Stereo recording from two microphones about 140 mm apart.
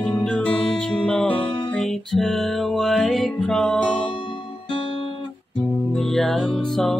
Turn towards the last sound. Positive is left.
turn(degrees=0)  # may be behind; listen again after turning